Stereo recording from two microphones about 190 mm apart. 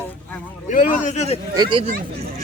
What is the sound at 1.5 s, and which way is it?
Speech, 25° right (ahead or behind).